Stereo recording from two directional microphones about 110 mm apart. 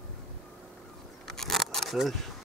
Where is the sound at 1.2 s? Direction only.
5° left (ahead or behind).